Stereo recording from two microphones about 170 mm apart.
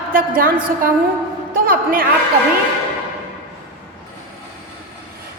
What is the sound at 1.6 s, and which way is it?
Speech, 60° right (ahead or behind).